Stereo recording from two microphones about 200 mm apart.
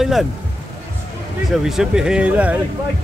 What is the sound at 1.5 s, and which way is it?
Speech, centre (ahead or behind).